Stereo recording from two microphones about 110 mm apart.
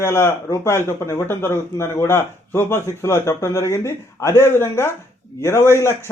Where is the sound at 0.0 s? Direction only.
25° left (ahead or behind).